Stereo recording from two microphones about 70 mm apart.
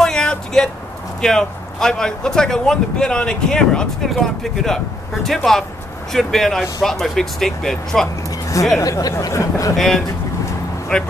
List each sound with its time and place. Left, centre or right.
0.0 s a sound: centre
1.2 s speech: centre
8.8 s speech: left
9.8 s speech: centre